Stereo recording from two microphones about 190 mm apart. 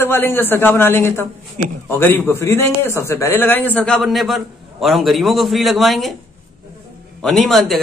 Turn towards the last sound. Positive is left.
turn(degrees=0)  # may be behind; listen again after turning